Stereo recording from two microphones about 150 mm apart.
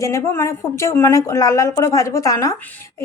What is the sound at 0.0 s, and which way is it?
A woman's voice, 20° left (ahead or behind).